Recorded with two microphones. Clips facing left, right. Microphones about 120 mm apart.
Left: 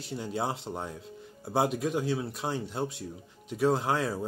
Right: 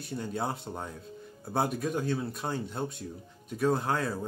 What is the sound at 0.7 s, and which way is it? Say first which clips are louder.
Speech: left 2 dB; 10° left (ahead or behind).